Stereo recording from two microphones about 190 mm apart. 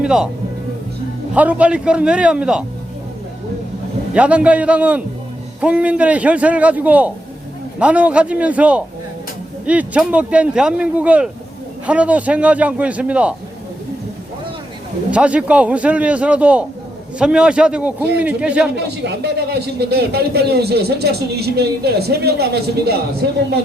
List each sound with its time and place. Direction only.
0.0 s speech: 5° right (ahead or behind)
1.3 s a man's voice: 5° right (ahead or behind)
4.1 s speech: 5° right (ahead or behind)
15.1 s a man's voice: 5° right (ahead or behind)
18.8 s speech: 60° right (ahead or behind)